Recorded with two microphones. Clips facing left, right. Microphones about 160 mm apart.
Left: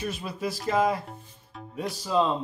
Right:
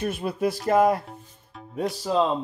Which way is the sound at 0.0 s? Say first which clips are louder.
Right 6 dB; 55° right (ahead or behind).